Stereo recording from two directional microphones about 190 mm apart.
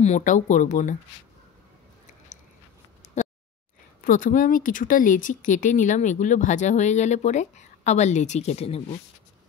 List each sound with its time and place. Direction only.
0.0 s speech: 40° left (ahead or behind)
4.0 s speech: 45° left (ahead or behind)